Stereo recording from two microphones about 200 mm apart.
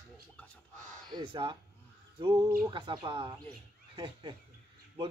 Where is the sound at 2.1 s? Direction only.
20° right (ahead or behind).